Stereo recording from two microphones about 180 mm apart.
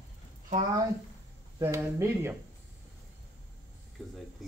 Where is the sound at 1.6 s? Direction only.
15° right (ahead or behind).